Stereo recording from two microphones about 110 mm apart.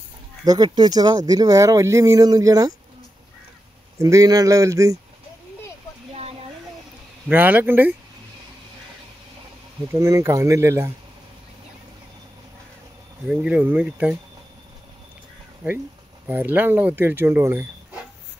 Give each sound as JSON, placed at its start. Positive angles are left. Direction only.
{"t": 0.7, "sound": "speech", "side_deg": -40}
{"t": 4.0, "sound": "speech", "side_deg": -30}
{"t": 7.2, "sound": "speech", "side_deg": -15}
{"t": 9.9, "sound": "speech", "side_deg": -30}
{"t": 13.3, "sound": "speech", "side_deg": -10}
{"t": 16.3, "sound": "speech", "side_deg": -15}